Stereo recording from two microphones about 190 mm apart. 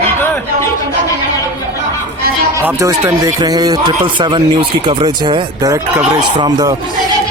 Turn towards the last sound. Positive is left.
turn(degrees=-25)  # may be behind; listen again after turning